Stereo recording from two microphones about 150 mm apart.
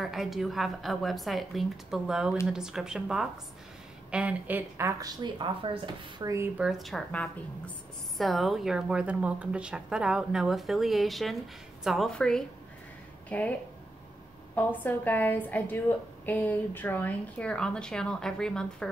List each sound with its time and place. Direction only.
0.0 s a woman's voice: centre (ahead or behind); by 5.7 s 30° right (ahead or behind)
6.1 s speech: 20° right (ahead or behind)
6.6 s a woman's voice: centre (ahead or behind)